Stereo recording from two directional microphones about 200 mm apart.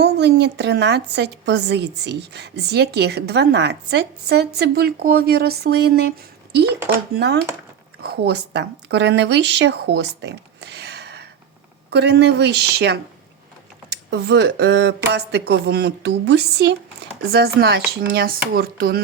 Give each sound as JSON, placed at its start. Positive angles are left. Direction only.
{"t": 0.0, "sound": "a woman's voice", "side_deg": -55}